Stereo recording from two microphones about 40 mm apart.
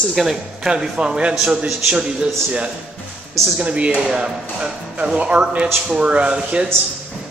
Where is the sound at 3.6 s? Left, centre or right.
Right.